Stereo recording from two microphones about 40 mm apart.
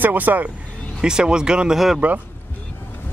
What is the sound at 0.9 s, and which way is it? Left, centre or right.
Speech, centre.